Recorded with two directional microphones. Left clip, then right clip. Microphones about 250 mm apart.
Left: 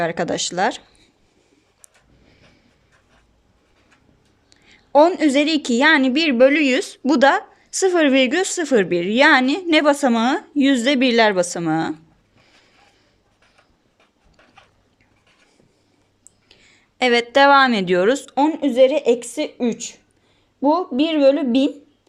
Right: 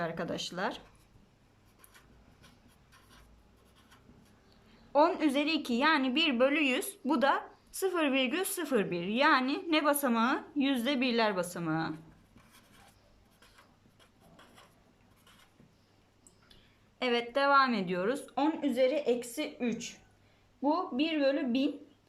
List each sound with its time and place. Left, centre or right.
0.0 s a woman's voice: left
4.9 s a woman's voice: left
17.0 s a woman's voice: left